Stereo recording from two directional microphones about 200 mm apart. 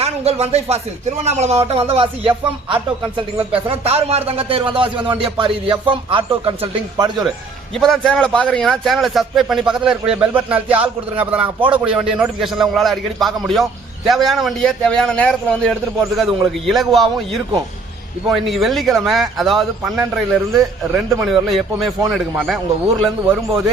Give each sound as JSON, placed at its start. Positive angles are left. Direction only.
{"t": 0.0, "sound": "speech", "side_deg": -30}
{"t": 7.2, "sound": "a man's voice", "side_deg": 0}